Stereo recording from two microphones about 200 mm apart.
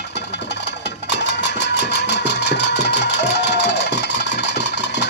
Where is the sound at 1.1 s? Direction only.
60° left (ahead or behind).